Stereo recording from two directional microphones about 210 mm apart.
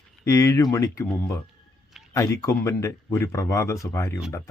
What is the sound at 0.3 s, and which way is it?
Speech, 15° left (ahead or behind).